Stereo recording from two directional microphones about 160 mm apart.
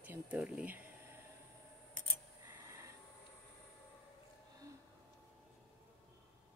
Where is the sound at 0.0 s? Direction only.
10° right (ahead or behind).